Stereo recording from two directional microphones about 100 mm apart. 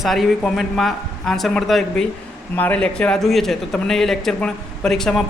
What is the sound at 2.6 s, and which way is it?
A man's voice, 15° left (ahead or behind).